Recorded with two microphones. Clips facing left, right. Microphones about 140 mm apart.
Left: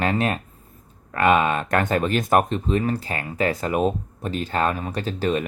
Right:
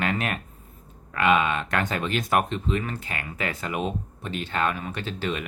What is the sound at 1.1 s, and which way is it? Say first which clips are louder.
Speech: left 3 dB; 40° left (ahead or behind).